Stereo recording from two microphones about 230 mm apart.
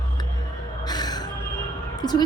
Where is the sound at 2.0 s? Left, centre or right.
Centre.